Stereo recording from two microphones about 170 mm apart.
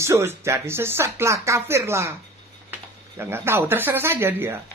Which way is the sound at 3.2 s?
15° right (ahead or behind).